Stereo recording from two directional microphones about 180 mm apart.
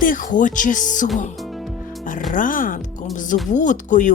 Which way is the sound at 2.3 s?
50° left (ahead or behind).